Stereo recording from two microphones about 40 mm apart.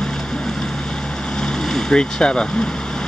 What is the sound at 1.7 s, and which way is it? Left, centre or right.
Speech, centre.